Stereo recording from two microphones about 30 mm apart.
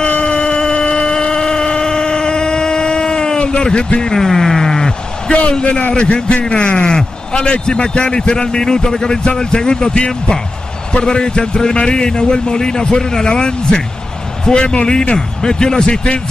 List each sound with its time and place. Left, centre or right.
0.2 s a sound: left
4.0 s speech: centre
5.6 s a man's voice: left